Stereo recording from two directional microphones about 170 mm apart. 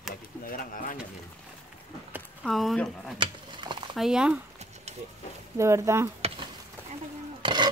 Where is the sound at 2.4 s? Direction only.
Centre (ahead or behind).